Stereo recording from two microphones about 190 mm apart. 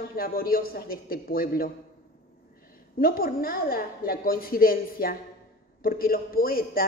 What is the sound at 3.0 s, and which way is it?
Speech, 50° left (ahead or behind).